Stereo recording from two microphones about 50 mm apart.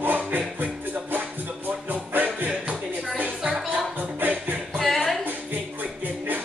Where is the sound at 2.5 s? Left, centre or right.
Right.